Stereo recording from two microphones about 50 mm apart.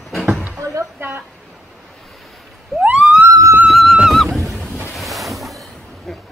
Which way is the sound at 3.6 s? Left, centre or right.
Centre.